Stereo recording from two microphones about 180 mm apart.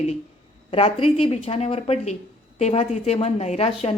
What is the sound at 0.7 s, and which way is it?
A woman's voice, 30° left (ahead or behind).